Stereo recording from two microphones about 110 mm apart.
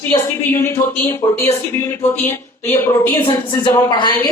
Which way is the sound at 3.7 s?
40° left (ahead or behind).